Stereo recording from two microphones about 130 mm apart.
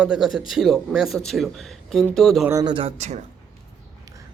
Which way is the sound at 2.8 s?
60° right (ahead or behind).